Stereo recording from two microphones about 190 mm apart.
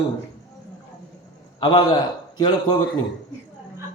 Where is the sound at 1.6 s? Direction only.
25° left (ahead or behind).